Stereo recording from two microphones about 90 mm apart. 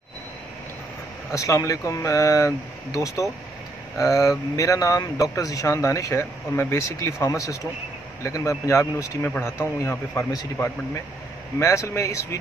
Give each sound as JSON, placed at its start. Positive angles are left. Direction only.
{"t": 1.3, "sound": "a man's voice", "side_deg": 35}